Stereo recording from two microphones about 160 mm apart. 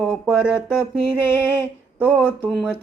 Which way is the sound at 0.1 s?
5° right (ahead or behind).